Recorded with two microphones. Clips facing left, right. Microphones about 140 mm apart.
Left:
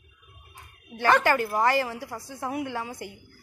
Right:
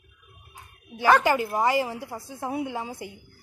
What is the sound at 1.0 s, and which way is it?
A woman's voice, 15° right (ahead or behind).